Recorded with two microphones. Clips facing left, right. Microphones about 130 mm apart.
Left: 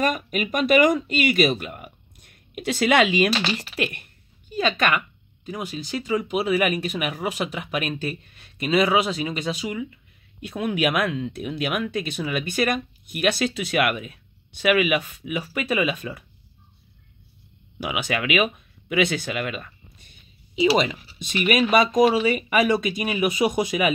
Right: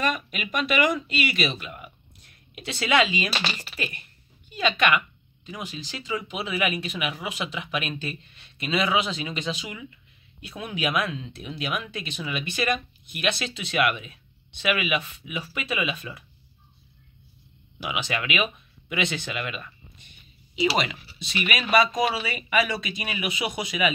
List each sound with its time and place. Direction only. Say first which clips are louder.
0.0 s speech: left 4 dB; 45° left (ahead or behind); by 4.0 s 60° left (ahead or behind)
4.6 s speech: left 1 dB; 40° left (ahead or behind)
10.4 s speech: left 6 dB; 50° left (ahead or behind)
17.8 s speech: left 4 dB; 45° left (ahead or behind)
21.2 s speech: left 8 dB; 50° left (ahead or behind)